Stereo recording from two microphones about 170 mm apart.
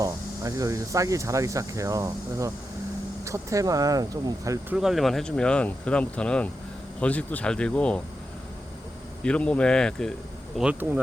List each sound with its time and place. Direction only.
0.0 s speech: 20° right (ahead or behind)
4.7 s speech: 5° right (ahead or behind)
9.2 s speech: 5° left (ahead or behind)
10.6 s speech: 5° right (ahead or behind)